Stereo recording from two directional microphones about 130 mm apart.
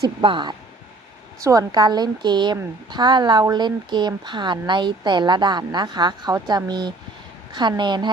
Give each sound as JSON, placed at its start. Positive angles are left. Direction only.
{"t": 0.2, "sound": "speech", "side_deg": -40}
{"t": 1.4, "sound": "speech", "side_deg": -25}